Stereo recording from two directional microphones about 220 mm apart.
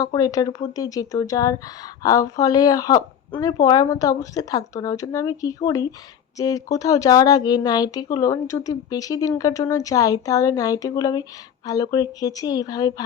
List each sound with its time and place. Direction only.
0.0 s speech: 15° left (ahead or behind)